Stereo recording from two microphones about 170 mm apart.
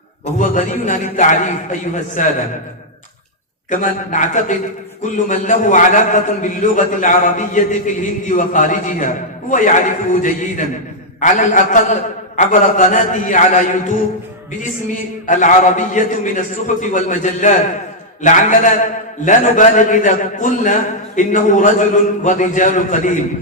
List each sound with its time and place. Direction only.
0.3 s a man's voice: 50° left (ahead or behind)
3.7 s a man's voice: 50° left (ahead or behind)
15.3 s a man's voice: 45° left (ahead or behind)